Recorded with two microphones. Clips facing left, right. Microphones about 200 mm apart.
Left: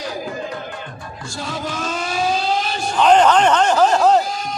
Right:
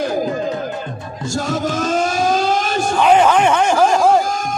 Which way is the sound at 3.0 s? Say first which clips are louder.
Even; 10° right (ahead or behind).